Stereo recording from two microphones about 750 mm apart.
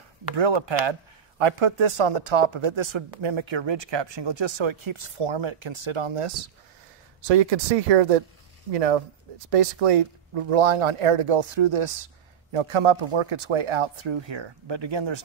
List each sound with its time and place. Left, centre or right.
0.4 s speech: right
7.2 s speech: right